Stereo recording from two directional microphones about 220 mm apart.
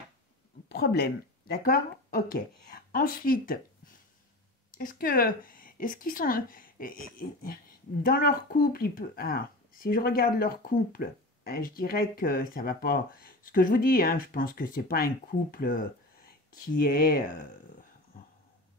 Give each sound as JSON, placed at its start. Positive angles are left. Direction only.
{"t": 0.7, "sound": "speech", "side_deg": 45}